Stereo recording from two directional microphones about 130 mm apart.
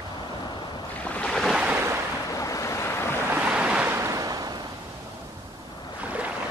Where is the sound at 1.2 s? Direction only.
5° left (ahead or behind).